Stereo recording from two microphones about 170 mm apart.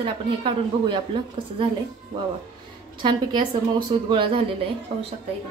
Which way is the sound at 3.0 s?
25° right (ahead or behind).